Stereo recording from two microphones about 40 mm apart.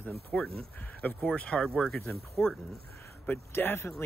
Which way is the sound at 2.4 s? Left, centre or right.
Left.